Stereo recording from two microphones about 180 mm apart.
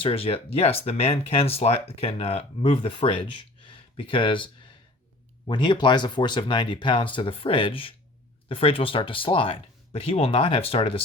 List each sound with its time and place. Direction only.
0.0 s speech: 30° left (ahead or behind)